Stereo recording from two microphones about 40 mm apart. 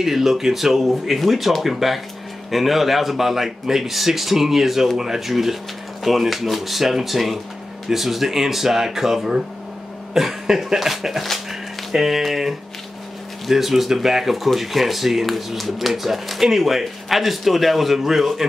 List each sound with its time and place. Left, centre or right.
0.0 s speech: centre